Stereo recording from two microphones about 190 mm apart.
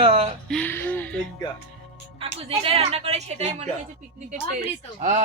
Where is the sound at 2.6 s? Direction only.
30° right (ahead or behind).